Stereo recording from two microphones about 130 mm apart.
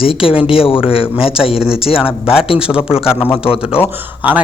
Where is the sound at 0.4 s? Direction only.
45° left (ahead or behind).